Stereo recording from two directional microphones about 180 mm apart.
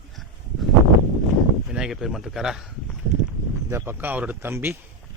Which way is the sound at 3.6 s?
15° right (ahead or behind).